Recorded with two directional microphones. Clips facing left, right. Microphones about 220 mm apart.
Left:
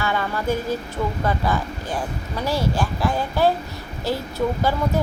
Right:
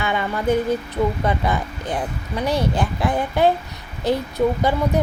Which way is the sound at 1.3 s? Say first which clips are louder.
Right 1 dB; 20° right (ahead or behind).